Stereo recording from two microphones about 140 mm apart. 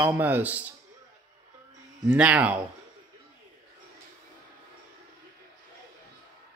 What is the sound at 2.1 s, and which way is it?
Speech, 10° right (ahead or behind).